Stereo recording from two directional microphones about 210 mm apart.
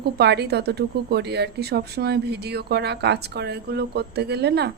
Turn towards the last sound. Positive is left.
turn(degrees=-50)  # may be behind; listen again after turning